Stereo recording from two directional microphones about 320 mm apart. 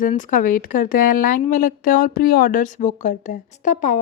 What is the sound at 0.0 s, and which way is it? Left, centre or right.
A woman's voice, left.